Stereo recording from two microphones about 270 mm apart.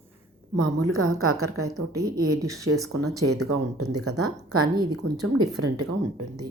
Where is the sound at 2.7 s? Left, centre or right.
Right.